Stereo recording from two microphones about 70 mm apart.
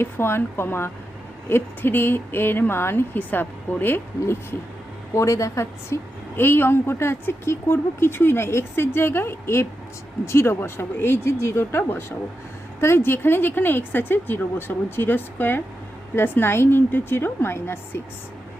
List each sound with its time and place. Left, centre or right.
0.0 s a woman's voice: left
5.1 s a woman's voice: left